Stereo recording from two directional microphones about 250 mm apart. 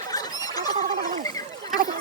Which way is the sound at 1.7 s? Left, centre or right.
Right.